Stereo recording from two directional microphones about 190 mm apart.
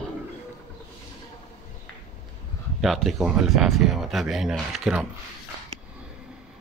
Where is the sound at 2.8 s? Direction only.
Centre (ahead or behind).